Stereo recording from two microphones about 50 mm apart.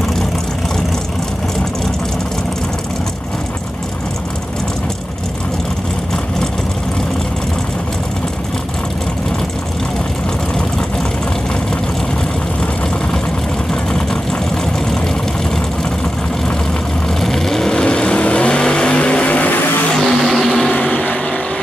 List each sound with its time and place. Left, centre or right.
17.2 s vehicle: centre; by 19.6 s left
20.1 s vehicle: centre
20.9 s vehicle: left